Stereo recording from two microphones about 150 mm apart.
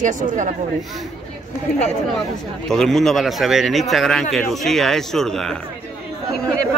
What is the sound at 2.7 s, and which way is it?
A man's voice, 5° left (ahead or behind).